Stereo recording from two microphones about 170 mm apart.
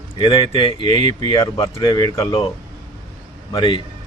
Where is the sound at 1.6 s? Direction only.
25° left (ahead or behind).